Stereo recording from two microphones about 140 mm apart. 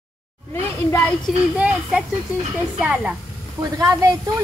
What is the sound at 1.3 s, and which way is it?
A woman's voice, centre (ahead or behind).